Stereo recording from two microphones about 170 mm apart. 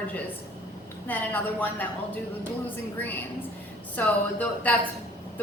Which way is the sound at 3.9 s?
10° left (ahead or behind).